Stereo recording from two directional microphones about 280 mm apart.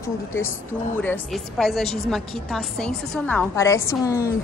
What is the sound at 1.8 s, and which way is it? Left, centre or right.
Speech, left.